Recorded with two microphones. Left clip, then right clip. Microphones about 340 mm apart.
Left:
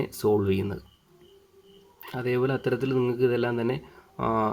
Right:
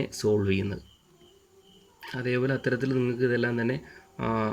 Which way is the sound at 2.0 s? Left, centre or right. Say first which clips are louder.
Left 2 dB; left.